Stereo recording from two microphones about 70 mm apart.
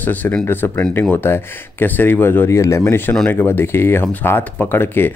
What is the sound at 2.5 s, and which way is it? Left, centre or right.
Speech, left.